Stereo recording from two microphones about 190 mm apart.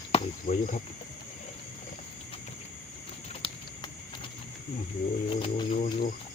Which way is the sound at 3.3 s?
30° left (ahead or behind).